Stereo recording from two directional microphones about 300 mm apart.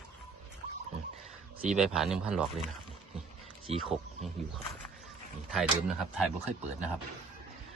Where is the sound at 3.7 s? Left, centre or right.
Centre.